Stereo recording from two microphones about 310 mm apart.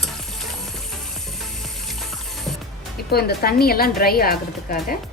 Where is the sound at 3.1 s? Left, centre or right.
Left.